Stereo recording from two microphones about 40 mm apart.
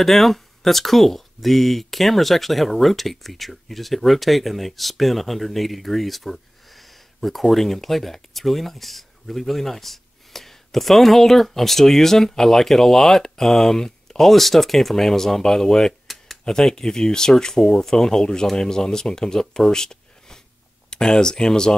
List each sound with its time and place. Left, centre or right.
0.0 s speech: centre
16.1 s a sound: centre
16.4 s speech: centre